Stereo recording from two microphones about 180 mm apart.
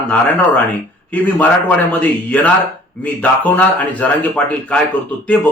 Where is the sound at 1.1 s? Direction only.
10° left (ahead or behind).